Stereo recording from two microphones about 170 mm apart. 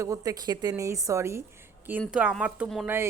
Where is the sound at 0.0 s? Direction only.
20° right (ahead or behind).